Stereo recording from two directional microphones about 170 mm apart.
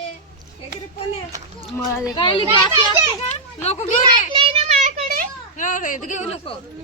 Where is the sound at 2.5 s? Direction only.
15° right (ahead or behind).